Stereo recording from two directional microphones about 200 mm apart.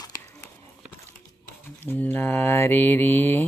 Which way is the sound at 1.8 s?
10° left (ahead or behind).